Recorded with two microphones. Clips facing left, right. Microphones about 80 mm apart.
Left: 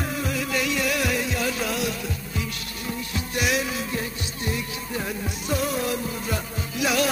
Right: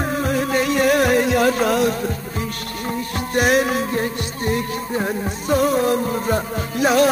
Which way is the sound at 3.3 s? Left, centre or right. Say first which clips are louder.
Right 9 dB; right.